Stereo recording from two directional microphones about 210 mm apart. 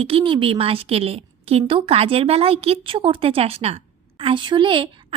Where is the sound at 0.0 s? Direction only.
25° right (ahead or behind).